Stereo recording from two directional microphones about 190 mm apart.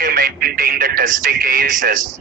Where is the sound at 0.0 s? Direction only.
50° right (ahead or behind).